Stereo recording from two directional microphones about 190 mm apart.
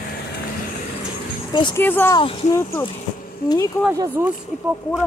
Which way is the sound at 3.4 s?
50° left (ahead or behind).